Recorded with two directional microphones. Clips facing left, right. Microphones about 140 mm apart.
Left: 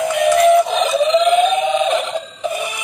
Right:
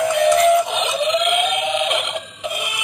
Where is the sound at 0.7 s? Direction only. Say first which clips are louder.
Left 5 dB; 35° left (ahead or behind).